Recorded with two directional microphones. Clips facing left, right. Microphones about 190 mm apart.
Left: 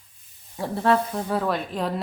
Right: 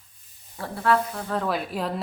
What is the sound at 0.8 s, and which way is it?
Speech, 25° left (ahead or behind).